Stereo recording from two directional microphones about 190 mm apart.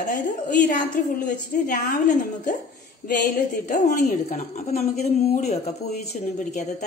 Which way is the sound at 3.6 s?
40° left (ahead or behind).